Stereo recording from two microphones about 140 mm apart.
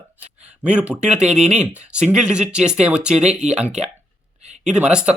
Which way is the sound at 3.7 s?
50° right (ahead or behind).